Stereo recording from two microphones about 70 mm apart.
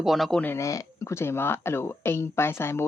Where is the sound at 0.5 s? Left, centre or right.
Left.